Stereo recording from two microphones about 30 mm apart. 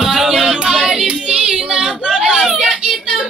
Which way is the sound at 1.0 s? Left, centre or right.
Right.